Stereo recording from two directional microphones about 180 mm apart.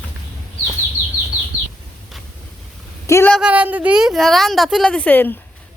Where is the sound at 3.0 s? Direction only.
15° left (ahead or behind).